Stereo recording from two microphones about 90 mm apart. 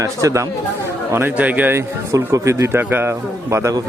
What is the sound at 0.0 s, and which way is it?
Speech, 35° right (ahead or behind).